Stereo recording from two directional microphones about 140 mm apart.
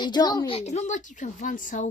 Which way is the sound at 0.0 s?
30° left (ahead or behind).